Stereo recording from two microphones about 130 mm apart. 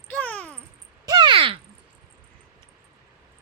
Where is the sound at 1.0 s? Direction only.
35° right (ahead or behind).